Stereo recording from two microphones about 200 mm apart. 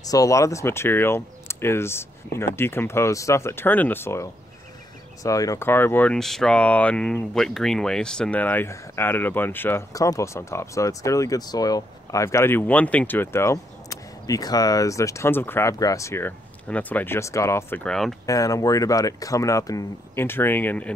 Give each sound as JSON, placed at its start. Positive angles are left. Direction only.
{"t": 0.0, "sound": "speech", "side_deg": 15}
{"t": 18.2, "sound": "speech", "side_deg": 15}